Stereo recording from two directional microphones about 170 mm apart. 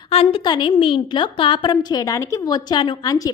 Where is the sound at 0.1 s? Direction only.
35° left (ahead or behind).